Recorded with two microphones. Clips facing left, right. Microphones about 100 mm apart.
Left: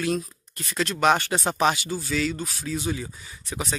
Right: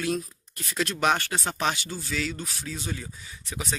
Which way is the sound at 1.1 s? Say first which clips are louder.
Left 4 dB; 25° left (ahead or behind).